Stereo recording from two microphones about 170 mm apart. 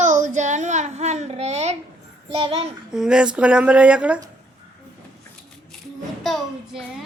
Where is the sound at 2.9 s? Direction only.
5° right (ahead or behind).